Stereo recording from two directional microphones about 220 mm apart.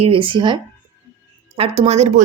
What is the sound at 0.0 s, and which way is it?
A woman's voice, 25° right (ahead or behind).